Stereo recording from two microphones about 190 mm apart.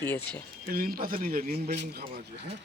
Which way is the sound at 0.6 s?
50° right (ahead or behind).